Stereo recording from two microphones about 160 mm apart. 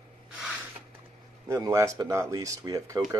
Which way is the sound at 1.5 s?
20° right (ahead or behind).